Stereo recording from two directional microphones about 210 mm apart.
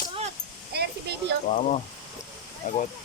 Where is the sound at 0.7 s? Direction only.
50° right (ahead or behind).